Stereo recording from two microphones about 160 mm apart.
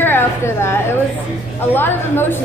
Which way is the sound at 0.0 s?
15° left (ahead or behind).